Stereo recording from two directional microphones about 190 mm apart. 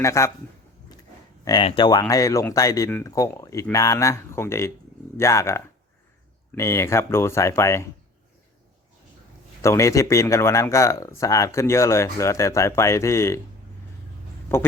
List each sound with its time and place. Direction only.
0.0 s a man's voice: 15° left (ahead or behind)
1.5 s a man's voice: 25° left (ahead or behind)
9.6 s a man's voice: 15° left (ahead or behind)
14.5 s a man's voice: 10° left (ahead or behind)